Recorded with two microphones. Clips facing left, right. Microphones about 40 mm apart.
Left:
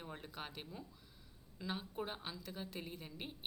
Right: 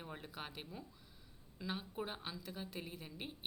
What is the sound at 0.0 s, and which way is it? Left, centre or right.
Speech, centre.